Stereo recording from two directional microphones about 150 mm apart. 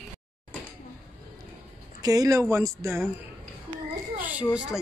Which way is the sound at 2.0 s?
25° right (ahead or behind).